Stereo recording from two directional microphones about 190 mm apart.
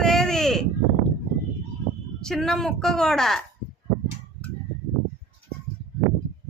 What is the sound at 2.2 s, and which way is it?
Speech, centre (ahead or behind).